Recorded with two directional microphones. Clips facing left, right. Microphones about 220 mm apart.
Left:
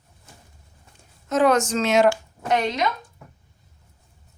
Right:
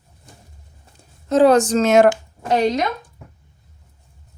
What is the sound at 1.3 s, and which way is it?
Speech, 30° right (ahead or behind).